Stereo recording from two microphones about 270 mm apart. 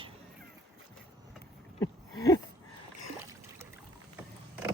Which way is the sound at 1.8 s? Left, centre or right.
Centre.